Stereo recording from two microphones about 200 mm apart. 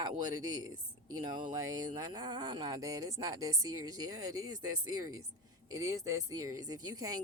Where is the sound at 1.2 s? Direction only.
20° right (ahead or behind).